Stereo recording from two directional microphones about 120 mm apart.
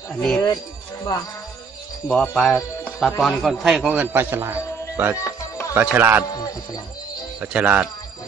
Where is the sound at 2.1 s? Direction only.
10° left (ahead or behind); by 5.1 s 15° right (ahead or behind).